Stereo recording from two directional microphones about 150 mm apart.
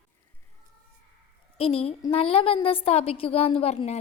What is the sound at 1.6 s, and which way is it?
A woman's voice, 40° left (ahead or behind).